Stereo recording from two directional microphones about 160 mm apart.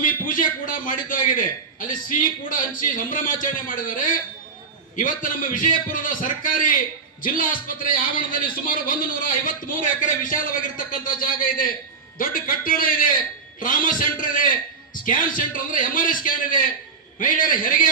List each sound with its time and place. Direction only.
0.0 s a man's voice: 60° left (ahead or behind)